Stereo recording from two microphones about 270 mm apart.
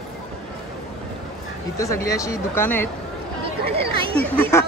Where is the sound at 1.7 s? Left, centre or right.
Centre.